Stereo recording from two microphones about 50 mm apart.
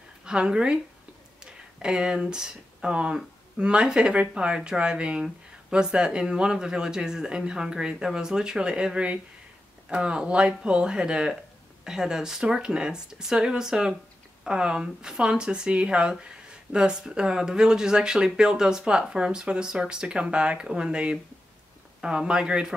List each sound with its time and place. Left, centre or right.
0.2 s a woman's voice: centre